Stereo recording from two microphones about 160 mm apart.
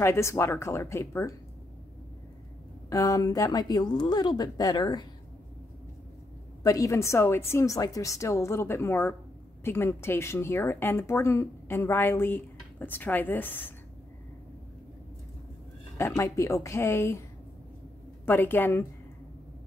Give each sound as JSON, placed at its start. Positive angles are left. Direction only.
{"t": 0.0, "sound": "speech", "side_deg": 15}
{"t": 2.9, "sound": "speech", "side_deg": 20}
{"t": 6.6, "sound": "speech", "side_deg": 20}
{"t": 16.2, "sound": "speech", "side_deg": 20}
{"t": 18.2, "sound": "speech", "side_deg": 15}